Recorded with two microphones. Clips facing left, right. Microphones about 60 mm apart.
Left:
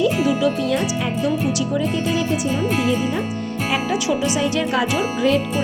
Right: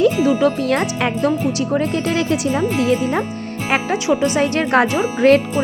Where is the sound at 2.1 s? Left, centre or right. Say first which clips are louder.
Right 3 dB; right.